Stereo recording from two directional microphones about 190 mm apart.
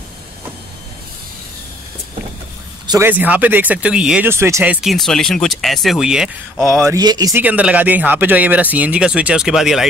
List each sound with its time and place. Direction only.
2.9 s speech: 10° right (ahead or behind)
4.8 s speech: centre (ahead or behind)
6.8 s speech: 15° right (ahead or behind)
7.4 s speech: 10° right (ahead or behind)